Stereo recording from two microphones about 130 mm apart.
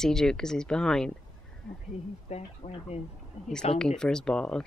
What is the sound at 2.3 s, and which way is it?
Speech, 50° left (ahead or behind).